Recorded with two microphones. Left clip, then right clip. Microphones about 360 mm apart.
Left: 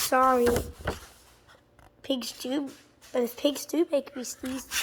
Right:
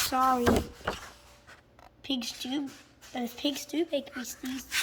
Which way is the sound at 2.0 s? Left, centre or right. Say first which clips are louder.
Left 3 dB; centre.